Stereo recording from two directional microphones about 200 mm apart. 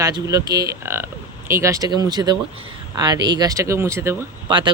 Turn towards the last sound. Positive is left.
turn(degrees=-25)  # may be behind; listen again after turning